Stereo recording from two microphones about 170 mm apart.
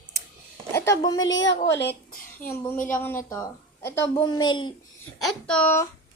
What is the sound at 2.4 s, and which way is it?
Speech, 55° left (ahead or behind).